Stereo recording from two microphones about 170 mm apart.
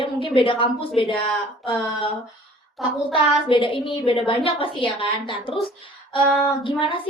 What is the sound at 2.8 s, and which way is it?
Child singing, centre (ahead or behind).